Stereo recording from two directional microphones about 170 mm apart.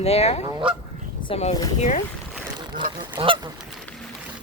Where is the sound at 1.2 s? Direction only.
40° left (ahead or behind).